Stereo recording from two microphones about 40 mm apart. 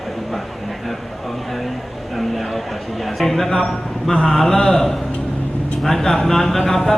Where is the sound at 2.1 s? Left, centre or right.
Centre.